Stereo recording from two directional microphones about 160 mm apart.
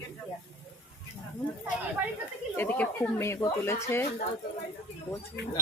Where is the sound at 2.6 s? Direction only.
10° left (ahead or behind).